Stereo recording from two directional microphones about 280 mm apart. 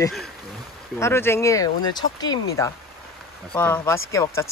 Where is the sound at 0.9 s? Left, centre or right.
Centre.